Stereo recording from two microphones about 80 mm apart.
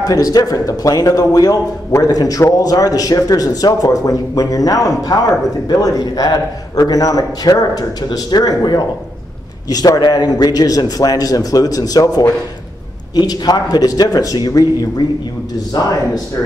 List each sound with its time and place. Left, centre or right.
0.0 s a man's voice: left
13.1 s a man's voice: left